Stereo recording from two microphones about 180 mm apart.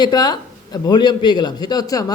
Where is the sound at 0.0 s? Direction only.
25° left (ahead or behind).